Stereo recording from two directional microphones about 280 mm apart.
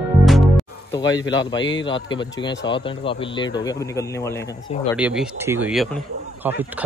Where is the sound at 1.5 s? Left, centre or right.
Left.